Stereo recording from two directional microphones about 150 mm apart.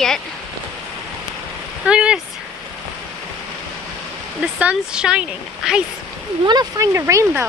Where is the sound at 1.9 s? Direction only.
5° right (ahead or behind).